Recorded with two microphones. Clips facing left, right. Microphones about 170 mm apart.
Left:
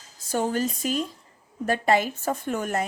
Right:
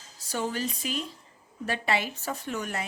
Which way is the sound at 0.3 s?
45° left (ahead or behind).